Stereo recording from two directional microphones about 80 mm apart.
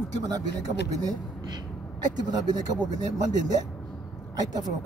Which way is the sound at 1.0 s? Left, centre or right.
Right.